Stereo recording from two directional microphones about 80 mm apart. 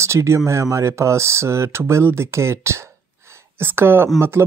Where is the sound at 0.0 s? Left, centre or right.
Right.